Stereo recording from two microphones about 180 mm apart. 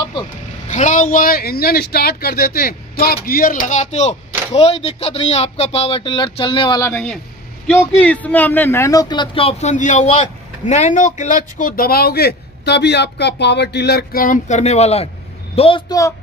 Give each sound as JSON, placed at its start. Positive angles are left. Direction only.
{"t": 0.7, "sound": "speech", "side_deg": 45}
{"t": 6.8, "sound": "a man's voice", "side_deg": 10}